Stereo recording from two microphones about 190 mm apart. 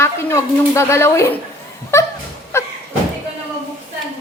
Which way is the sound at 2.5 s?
15° left (ahead or behind).